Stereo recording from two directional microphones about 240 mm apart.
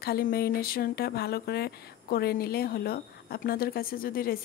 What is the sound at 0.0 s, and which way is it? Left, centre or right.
Speech, left.